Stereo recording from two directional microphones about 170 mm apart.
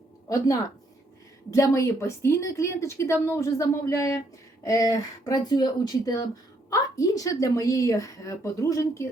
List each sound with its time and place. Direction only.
0.3 s a woman's voice: 20° left (ahead or behind)